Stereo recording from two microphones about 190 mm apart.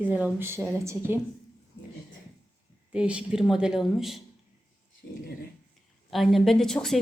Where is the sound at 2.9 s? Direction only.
5° right (ahead or behind).